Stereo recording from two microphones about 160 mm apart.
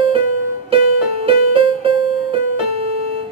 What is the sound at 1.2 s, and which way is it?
Music, 35° right (ahead or behind).